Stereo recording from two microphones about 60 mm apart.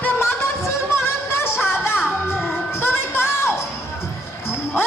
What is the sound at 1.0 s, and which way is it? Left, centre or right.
Music, left.